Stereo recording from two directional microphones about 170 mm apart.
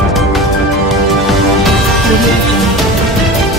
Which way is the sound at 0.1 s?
Centre (ahead or behind).